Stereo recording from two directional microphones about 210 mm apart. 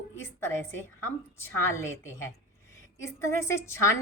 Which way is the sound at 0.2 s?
10° left (ahead or behind).